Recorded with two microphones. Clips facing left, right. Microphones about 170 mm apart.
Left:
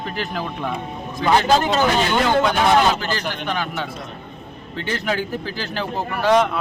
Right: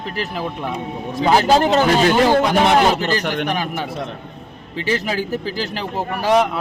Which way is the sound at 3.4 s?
15° right (ahead or behind).